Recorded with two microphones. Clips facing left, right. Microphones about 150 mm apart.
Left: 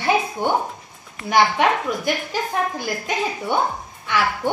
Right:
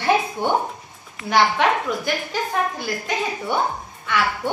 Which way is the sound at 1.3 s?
15° left (ahead or behind).